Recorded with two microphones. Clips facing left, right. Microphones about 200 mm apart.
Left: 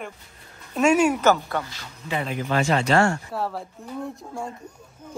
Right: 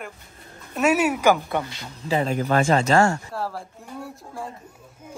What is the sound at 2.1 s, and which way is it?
Speech, 40° right (ahead or behind).